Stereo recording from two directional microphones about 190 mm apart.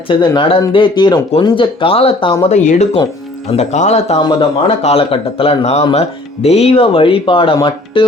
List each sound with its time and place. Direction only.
0.1 s speech: 25° left (ahead or behind)
4.2 s speech: 25° left (ahead or behind)